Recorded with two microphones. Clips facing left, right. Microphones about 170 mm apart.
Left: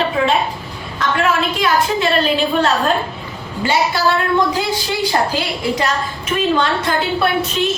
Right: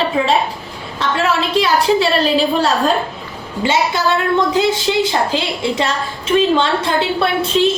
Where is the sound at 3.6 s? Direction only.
25° right (ahead or behind).